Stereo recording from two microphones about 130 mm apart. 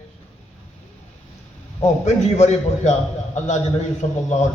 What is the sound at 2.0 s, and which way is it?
Speech, 60° left (ahead or behind).